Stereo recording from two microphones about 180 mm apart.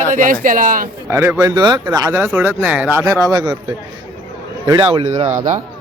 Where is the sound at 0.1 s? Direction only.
45° right (ahead or behind).